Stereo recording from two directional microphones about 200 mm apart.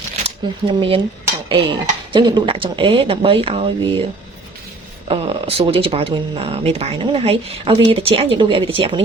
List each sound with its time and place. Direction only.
0.3 s speech: 25° right (ahead or behind)
1.5 s cutlery: 25° right (ahead or behind)
2.1 s speech: 25° right (ahead or behind)
5.0 s speech: 25° right (ahead or behind)